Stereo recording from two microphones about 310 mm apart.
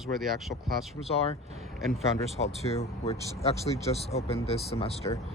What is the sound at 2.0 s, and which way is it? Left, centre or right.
Speech, centre.